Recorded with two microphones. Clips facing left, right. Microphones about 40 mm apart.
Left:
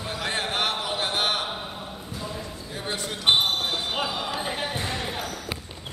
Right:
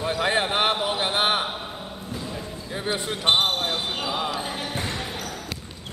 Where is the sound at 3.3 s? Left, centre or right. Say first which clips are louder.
Right 1 dB; right.